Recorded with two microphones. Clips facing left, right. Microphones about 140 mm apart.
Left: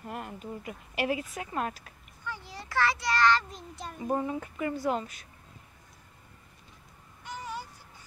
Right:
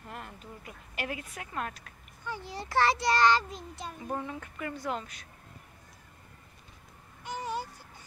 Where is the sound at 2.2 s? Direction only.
25° right (ahead or behind).